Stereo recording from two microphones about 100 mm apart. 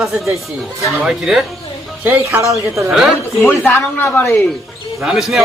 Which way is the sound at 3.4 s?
20° left (ahead or behind).